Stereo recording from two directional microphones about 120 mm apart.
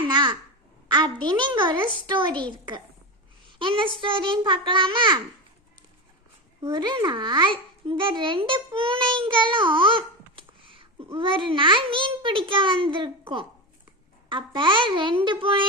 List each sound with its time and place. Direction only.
0.0 s babbling: 40° right (ahead or behind)
0.9 s a child's voice: 40° right (ahead or behind)
6.6 s a child's voice: 35° right (ahead or behind)